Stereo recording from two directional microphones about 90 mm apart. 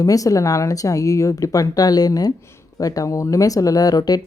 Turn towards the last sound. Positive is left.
turn(degrees=45)  # may be behind; listen again after turning